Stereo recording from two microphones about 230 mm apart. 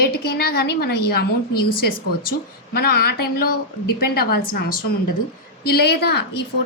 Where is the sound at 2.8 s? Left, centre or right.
Left.